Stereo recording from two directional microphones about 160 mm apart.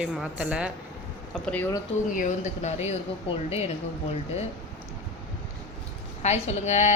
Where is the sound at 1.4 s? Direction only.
10° left (ahead or behind).